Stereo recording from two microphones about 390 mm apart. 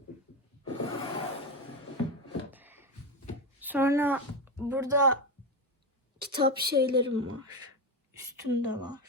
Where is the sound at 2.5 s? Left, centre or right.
Centre.